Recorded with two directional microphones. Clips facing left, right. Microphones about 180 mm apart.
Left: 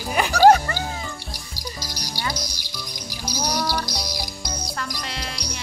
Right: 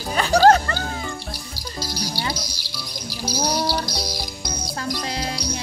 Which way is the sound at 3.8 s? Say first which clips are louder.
Right 2 dB; 15° left (ahead or behind).